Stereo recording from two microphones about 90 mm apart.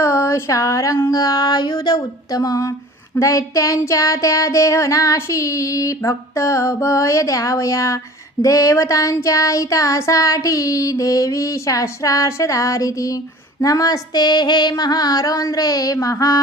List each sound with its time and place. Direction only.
0.0 s a sound: 35° left (ahead or behind)
1.1 s female singing: 40° left (ahead or behind)
3.2 s child singing: 35° left (ahead or behind)
13.6 s female singing: 40° left (ahead or behind)